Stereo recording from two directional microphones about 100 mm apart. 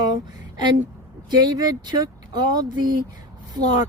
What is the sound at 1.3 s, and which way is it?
Speech, 45° right (ahead or behind).